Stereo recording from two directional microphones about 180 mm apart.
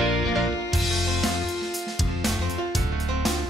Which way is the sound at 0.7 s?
Centre (ahead or behind).